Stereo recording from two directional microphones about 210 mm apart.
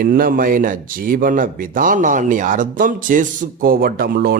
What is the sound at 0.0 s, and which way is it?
Speech, 40° right (ahead or behind).